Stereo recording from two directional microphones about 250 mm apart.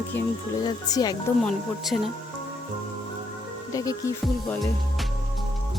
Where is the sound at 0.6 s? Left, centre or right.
Centre.